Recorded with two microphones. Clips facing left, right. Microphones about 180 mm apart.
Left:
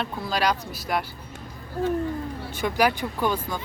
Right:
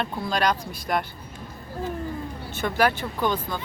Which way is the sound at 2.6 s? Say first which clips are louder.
Even; 10° left (ahead or behind).